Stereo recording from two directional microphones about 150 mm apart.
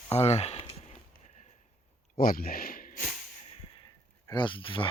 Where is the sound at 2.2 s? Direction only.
75° left (ahead or behind).